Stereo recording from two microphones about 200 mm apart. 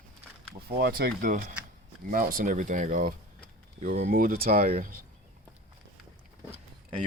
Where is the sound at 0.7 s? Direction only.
50° right (ahead or behind).